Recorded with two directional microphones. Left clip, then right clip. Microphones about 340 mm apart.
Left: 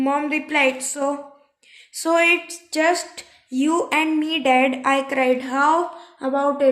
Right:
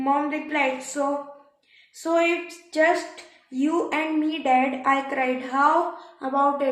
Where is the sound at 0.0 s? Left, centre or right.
Left.